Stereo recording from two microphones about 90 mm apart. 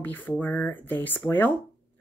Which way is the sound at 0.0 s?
20° left (ahead or behind).